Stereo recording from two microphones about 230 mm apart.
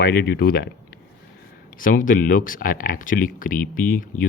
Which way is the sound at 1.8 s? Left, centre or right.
Left.